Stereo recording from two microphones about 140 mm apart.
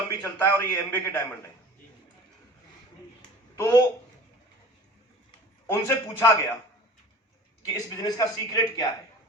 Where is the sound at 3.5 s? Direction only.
20° left (ahead or behind).